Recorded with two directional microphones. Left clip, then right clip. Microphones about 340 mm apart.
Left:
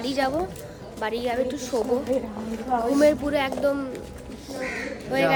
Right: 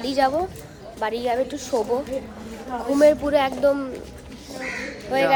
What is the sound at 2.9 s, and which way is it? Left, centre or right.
Speech, centre.